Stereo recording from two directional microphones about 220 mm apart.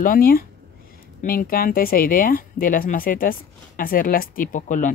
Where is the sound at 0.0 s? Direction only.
40° left (ahead or behind).